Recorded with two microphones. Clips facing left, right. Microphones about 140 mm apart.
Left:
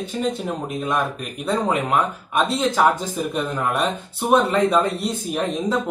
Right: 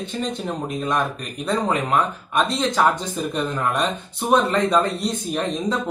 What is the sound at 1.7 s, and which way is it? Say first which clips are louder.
Speech: even; 5° left (ahead or behind).